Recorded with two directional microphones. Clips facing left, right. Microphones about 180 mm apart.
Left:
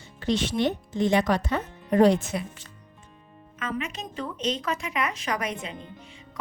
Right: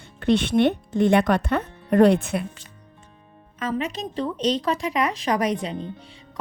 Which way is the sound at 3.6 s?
35° right (ahead or behind).